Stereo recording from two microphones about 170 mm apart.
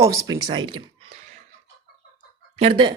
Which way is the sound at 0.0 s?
20° right (ahead or behind).